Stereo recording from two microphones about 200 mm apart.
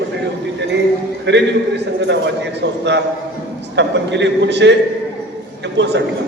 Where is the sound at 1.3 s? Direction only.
60° right (ahead or behind).